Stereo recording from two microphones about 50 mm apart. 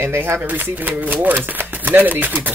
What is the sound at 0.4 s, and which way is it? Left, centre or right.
Speech, right.